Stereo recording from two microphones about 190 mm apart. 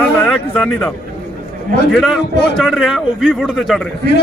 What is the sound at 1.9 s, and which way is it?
A man's voice, centre (ahead or behind).